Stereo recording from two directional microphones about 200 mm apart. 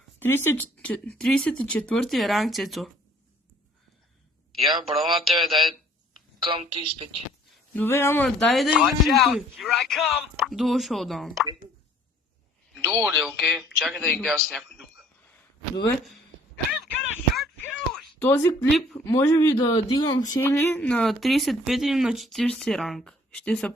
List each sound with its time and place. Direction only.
0.2 s speech: 10° left (ahead or behind)
4.6 s speech: centre (ahead or behind)
6.4 s speech: 25° right (ahead or behind)
7.5 s speech: 10° left (ahead or behind)
12.7 s a man's voice: centre (ahead or behind)
17.3 s a sound: 5° left (ahead or behind)
18.7 s speech: centre (ahead or behind)
19.0 s speech: 10° left (ahead or behind)